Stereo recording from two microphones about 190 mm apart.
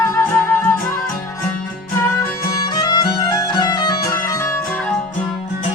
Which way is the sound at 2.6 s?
20° left (ahead or behind).